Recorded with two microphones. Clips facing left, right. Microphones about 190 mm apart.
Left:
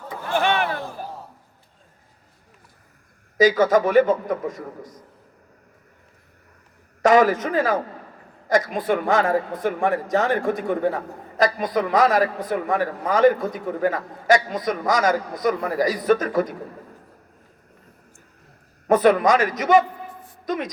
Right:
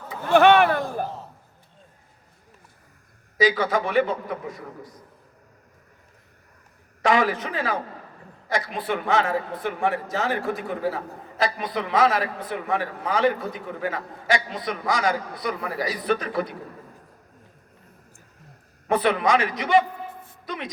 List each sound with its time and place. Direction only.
0.3 s a sound: 60° right (ahead or behind)
3.3 s a man's voice: 45° left (ahead or behind)
7.0 s a man's voice: 45° left (ahead or behind)
18.9 s a man's voice: 45° left (ahead or behind)